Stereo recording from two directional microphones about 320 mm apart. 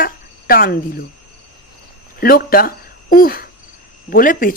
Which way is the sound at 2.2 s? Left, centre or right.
Left.